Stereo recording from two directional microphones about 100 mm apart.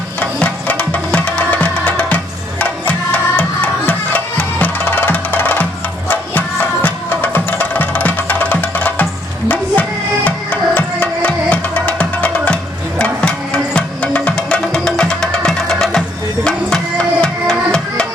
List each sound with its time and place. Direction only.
0.2 s music: 15° left (ahead or behind)
10.2 s music: 15° left (ahead or behind)